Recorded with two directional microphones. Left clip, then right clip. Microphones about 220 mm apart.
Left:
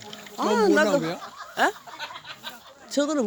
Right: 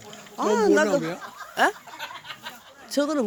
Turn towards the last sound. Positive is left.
turn(degrees=0)  # may be behind; listen again after turning